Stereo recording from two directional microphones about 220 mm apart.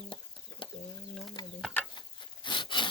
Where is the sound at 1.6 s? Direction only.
5° left (ahead or behind).